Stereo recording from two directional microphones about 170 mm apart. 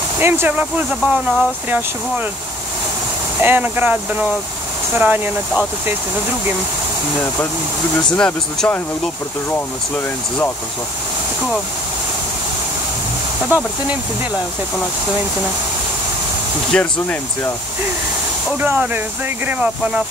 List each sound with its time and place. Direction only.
0.2 s speech: 10° right (ahead or behind)
3.3 s speech: 10° right (ahead or behind)
8.2 s speech: 5° left (ahead or behind)
13.5 s speech: 10° right (ahead or behind)
16.7 s speech: 10° left (ahead or behind)
18.6 s speech: 10° right (ahead or behind)